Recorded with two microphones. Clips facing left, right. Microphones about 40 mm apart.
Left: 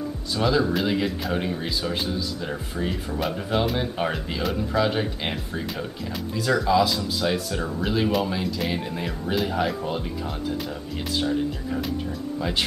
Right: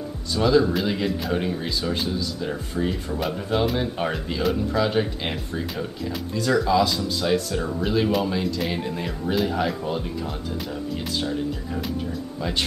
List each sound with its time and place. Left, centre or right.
0.4 s speech: centre
12.4 s speech: centre